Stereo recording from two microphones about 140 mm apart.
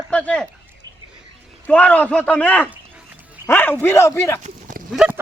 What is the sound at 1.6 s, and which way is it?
A man's voice, 10° left (ahead or behind).